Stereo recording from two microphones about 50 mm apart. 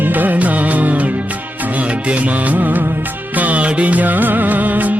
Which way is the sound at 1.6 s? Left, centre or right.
Right.